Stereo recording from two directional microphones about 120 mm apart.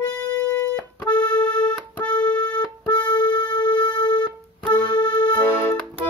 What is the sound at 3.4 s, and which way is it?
Music, 40° left (ahead or behind).